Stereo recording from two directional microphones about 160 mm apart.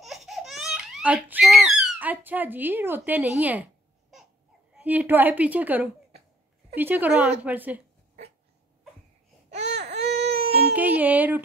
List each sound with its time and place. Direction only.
0.0 s baby laughter: centre (ahead or behind)
3.0 s a sound: 10° right (ahead or behind)
4.7 s a woman's voice: 10° right (ahead or behind)
9.6 s baby cry: 90° right
10.2 s child singing: 40° right (ahead or behind)
10.8 s a woman's voice: 10° right (ahead or behind)